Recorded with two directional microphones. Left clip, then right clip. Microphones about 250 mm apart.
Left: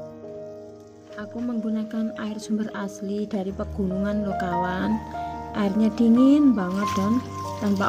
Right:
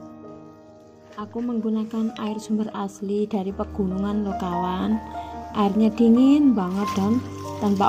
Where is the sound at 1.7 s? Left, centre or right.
Centre.